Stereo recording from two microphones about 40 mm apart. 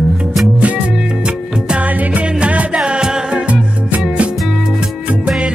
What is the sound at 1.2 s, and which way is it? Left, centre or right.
Music, right.